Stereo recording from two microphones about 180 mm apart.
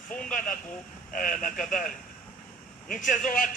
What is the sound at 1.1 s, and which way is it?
Speech, 50° left (ahead or behind).